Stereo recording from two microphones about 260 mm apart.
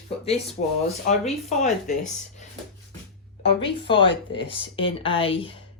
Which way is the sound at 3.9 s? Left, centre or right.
Centre.